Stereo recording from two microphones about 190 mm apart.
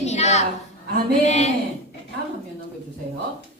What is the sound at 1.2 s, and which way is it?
Speech, 35° left (ahead or behind).